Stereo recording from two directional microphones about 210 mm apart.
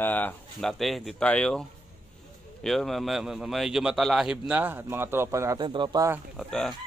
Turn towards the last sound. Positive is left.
turn(degrees=0)  # may be behind; listen again after turning